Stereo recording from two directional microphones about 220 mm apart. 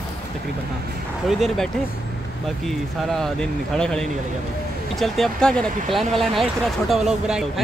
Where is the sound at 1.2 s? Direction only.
Centre (ahead or behind).